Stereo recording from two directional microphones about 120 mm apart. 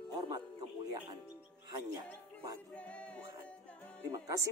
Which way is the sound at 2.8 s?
10° left (ahead or behind).